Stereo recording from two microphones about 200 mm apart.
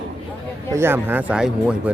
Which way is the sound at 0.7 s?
10° right (ahead or behind).